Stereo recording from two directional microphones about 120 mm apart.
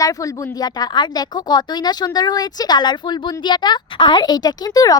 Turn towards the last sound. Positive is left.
turn(degrees=30)  # may be behind; listen again after turning